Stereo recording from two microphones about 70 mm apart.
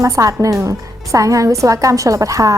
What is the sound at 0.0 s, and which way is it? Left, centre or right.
Speech, right.